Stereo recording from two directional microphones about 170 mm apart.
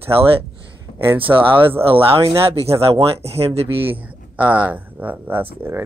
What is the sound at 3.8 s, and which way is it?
Speech, 10° right (ahead or behind).